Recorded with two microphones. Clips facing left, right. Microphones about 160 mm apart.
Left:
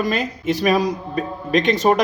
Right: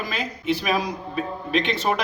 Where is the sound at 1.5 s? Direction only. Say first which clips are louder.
Left 7 dB; 45° left (ahead or behind).